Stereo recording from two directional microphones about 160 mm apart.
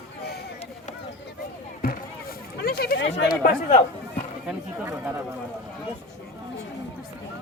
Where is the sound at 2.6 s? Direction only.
75° left (ahead or behind).